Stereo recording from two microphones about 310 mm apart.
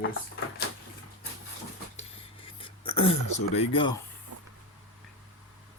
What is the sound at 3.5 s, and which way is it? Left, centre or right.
Speech, centre.